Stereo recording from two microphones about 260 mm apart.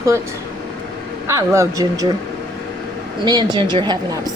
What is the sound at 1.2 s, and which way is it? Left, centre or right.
Speech, centre.